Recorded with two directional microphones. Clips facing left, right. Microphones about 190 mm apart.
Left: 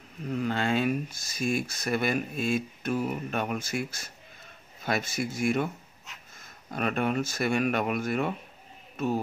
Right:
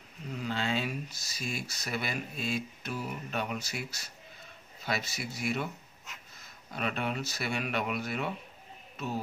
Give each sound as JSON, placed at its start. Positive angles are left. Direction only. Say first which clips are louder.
{"t": 0.3, "sound": "speech", "louder": "left 5 dB", "side_deg": 50}